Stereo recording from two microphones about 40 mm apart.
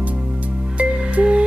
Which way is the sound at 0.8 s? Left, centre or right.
Right.